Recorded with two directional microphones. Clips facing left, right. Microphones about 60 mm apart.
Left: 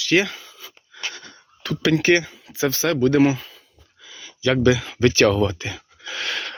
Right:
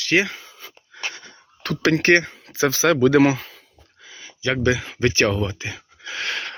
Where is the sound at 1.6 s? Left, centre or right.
Right.